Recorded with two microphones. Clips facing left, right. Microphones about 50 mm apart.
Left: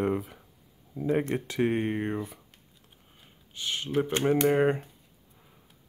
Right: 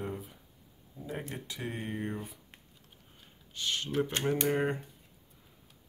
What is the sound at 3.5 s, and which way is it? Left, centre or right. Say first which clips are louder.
Speech: left 3 dB; centre.